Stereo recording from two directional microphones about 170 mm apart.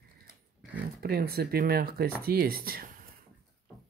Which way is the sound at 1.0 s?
70° right (ahead or behind).